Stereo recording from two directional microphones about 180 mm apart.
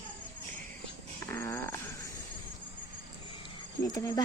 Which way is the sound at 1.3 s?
15° left (ahead or behind).